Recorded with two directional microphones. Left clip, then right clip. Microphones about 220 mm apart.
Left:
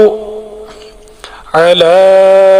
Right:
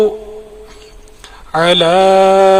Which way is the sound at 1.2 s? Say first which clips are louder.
Left 5 dB; 40° left (ahead or behind).